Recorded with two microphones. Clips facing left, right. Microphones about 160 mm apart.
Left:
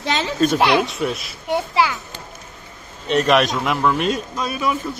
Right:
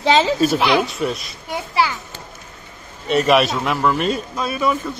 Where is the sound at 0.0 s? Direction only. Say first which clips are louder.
Right 7 dB; 90° right.